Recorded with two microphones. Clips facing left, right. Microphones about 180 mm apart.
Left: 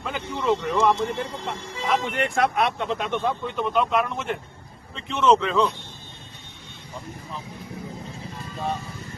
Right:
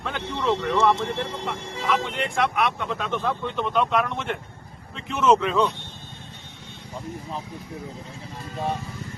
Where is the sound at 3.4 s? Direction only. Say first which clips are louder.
Right 2 dB; 5° left (ahead or behind).